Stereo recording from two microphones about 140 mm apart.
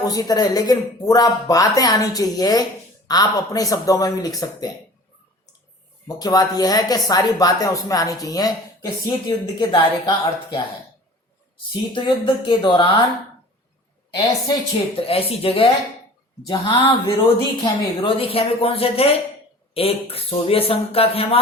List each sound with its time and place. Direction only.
0.1 s speech: 25° left (ahead or behind)
6.1 s speech: 30° left (ahead or behind)
15.0 s speech: 45° left (ahead or behind)